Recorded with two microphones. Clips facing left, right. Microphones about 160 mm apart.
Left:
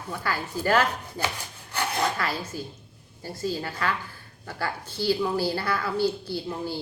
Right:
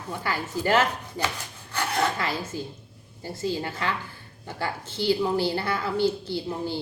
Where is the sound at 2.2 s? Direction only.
20° right (ahead or behind).